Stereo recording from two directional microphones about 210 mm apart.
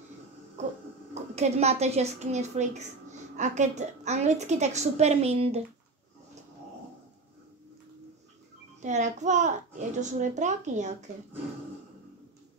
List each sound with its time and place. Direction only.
1.3 s a woman's voice: 30° right (ahead or behind)
8.8 s a woman's voice: 35° right (ahead or behind)